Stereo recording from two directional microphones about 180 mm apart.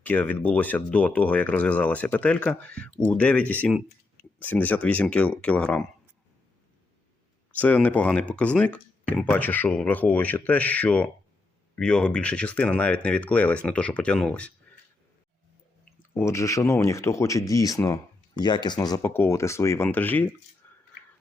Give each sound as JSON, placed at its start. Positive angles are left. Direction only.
{"t": 0.0, "sound": "speech", "side_deg": 10}
{"t": 7.5, "sound": "speech", "side_deg": 10}
{"t": 15.8, "sound": "speech", "side_deg": 15}
{"t": 20.6, "sound": "whispering", "side_deg": 10}